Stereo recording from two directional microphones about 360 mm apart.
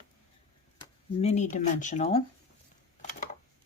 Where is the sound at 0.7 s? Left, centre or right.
Centre.